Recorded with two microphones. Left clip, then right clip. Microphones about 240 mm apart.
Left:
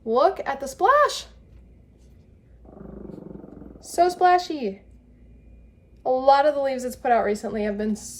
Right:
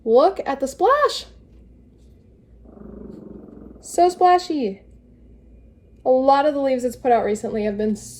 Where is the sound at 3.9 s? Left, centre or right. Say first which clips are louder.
Right 3 dB; left.